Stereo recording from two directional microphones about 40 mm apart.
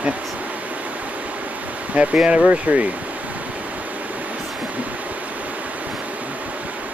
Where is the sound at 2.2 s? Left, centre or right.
Right.